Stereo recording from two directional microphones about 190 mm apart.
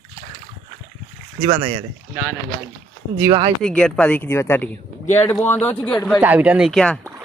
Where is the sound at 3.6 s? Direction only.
5° left (ahead or behind).